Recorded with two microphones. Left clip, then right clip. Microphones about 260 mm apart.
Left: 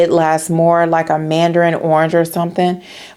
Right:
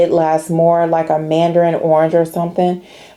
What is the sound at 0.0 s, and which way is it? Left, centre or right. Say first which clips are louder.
Speech: even; left.